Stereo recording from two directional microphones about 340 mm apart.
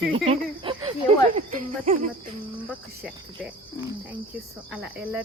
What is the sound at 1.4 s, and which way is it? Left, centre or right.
Speech, right.